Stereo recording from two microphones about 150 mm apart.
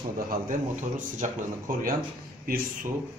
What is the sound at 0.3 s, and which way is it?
Speech, 60° right (ahead or behind).